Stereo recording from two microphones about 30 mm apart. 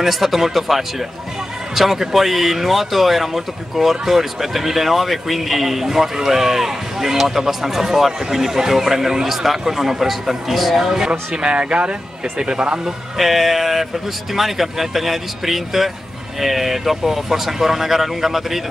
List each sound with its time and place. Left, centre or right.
0.0 s speech: centre
11.1 s speech: right
13.2 s speech: centre